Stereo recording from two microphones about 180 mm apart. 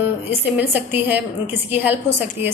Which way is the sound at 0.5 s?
10° right (ahead or behind).